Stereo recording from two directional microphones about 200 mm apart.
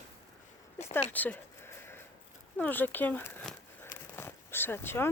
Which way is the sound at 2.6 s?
10° left (ahead or behind).